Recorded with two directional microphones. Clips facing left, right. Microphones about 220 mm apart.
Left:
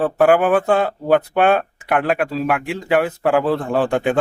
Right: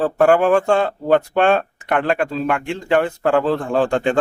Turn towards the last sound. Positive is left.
turn(degrees=5)  # may be behind; listen again after turning